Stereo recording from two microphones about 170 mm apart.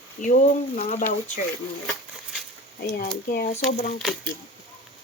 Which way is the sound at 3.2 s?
55° left (ahead or behind).